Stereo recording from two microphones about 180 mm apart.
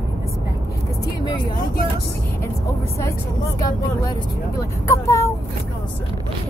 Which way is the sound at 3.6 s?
20° left (ahead or behind).